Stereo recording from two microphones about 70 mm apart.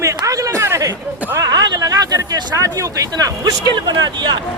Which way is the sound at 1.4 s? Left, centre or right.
Right.